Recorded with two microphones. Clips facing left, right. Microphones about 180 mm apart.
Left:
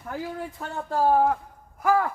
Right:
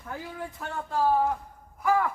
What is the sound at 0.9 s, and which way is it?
Speech, 50° left (ahead or behind).